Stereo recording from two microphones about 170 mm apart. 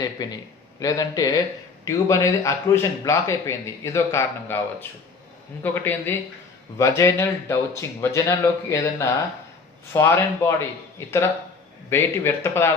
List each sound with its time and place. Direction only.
0.0 s a man's voice: 25° left (ahead or behind)
5.6 s a man's voice: 10° left (ahead or behind)